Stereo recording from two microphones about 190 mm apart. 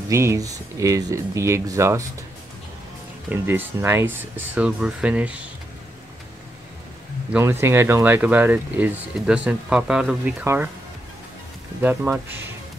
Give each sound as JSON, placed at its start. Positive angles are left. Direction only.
{"t": 0.1, "sound": "speech", "side_deg": -15}
{"t": 3.3, "sound": "speech", "side_deg": -10}
{"t": 7.3, "sound": "speech", "side_deg": -10}
{"t": 11.8, "sound": "speech", "side_deg": -10}